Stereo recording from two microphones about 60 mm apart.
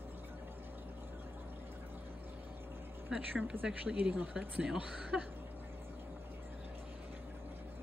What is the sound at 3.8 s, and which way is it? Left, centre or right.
A woman's voice, right.